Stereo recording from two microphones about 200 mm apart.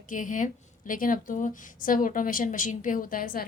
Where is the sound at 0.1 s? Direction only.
40° left (ahead or behind).